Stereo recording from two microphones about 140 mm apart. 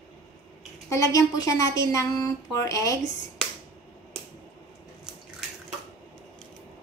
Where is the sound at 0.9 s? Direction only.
25° left (ahead or behind).